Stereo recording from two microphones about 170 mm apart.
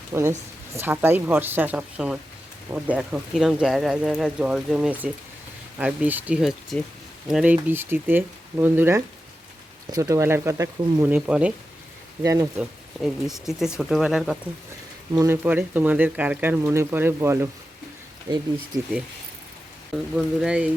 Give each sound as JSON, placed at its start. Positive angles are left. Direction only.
{"t": 0.1, "sound": "speech", "side_deg": -15}
{"t": 11.3, "sound": "speech", "side_deg": -5}
{"t": 12.2, "sound": "speech", "side_deg": -20}
{"t": 12.5, "sound": "speech", "side_deg": -5}
{"t": 15.1, "sound": "speech", "side_deg": -15}
{"t": 20.1, "sound": "speech", "side_deg": -5}